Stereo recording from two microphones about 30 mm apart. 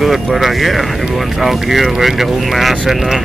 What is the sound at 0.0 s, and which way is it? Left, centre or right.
Speech, centre.